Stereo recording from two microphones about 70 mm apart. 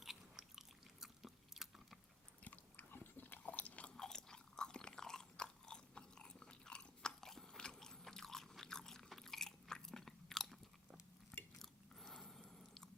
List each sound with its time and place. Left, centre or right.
0.0 s biting: centre
1.0 s chewing: centre
2.4 s biting: left
3.9 s chewing: centre
11.6 s biting: centre